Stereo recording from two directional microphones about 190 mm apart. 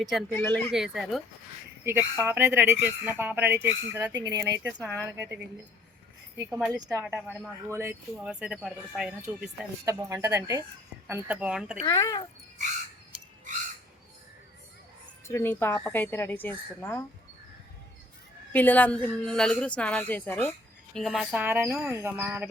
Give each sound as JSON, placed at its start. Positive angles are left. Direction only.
{"t": 0.0, "sound": "speech", "side_deg": 0}
{"t": 0.3, "sound": "speech", "side_deg": 10}
{"t": 0.7, "sound": "speech", "side_deg": 0}
{"t": 1.8, "sound": "speech", "side_deg": -15}
{"t": 6.8, "sound": "speech", "side_deg": 0}
{"t": 7.7, "sound": "speech", "side_deg": -15}
{"t": 11.1, "sound": "speech", "side_deg": -5}
{"t": 11.9, "sound": "speech", "side_deg": 15}
{"t": 15.3, "sound": "speech", "side_deg": 10}
{"t": 18.5, "sound": "speech", "side_deg": 10}